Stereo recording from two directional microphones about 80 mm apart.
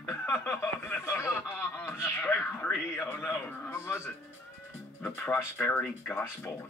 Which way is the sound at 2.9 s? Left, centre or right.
Left.